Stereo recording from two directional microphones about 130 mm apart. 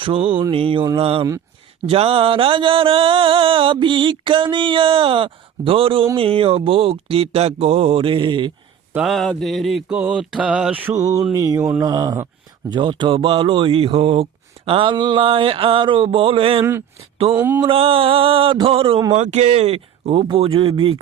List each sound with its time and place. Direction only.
0.0 s mantra: 40° right (ahead or behind)
9.0 s mantra: centre (ahead or behind)
10.9 s mantra: 25° right (ahead or behind); by 16.6 s 45° right (ahead or behind)
17.3 s mantra: 15° right (ahead or behind)
17.7 s mantra: 45° right (ahead or behind)
19.1 s mantra: 60° right (ahead or behind); by 21.0 s 40° right (ahead or behind)